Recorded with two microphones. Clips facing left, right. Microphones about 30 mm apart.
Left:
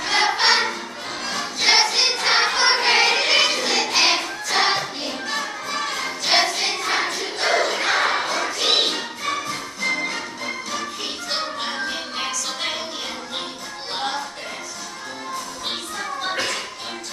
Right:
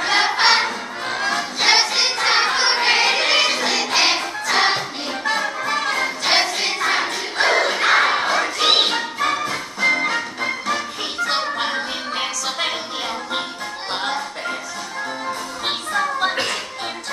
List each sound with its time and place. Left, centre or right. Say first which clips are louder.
0.0 s choir: right 2 dB; centre
0.7 s music: right 3 dB; right
1.6 s music: even; centre
2.2 s choir: right 1 dB; centre
3.7 s music: right 1 dB; centre
5.2 s music: right 9 dB; right
6.2 s music: left 1 dB; centre
6.9 s crowd: right 2 dB; centre
7.7 s battle cry: right 4 dB; centre
8.4 s music: right 4 dB; right
9.2 s music: right 5 dB; right
15.9 s music: right 8 dB; right
16.3 s music: right 2 dB; right